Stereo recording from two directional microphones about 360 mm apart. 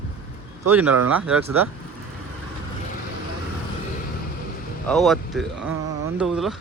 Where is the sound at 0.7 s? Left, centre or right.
Centre.